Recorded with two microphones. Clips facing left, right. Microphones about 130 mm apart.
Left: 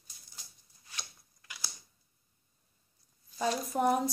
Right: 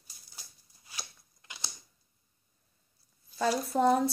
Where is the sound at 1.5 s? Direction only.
25° right (ahead or behind).